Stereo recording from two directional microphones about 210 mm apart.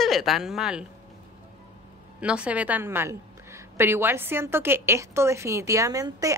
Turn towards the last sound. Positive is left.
turn(degrees=-15)  # may be behind; listen again after turning